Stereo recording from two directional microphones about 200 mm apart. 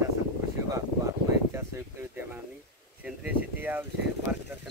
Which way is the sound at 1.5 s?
15° right (ahead or behind).